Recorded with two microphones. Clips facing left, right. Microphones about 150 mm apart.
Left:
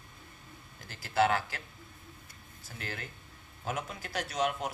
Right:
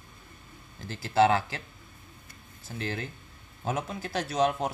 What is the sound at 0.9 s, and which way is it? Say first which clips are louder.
Speech: right 5 dB; 25° right (ahead or behind).